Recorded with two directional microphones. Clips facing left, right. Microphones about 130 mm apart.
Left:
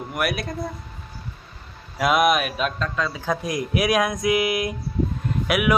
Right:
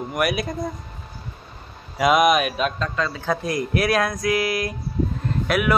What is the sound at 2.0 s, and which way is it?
Speech, centre (ahead or behind).